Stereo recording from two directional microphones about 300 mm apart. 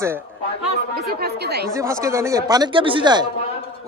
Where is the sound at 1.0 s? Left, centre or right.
Right.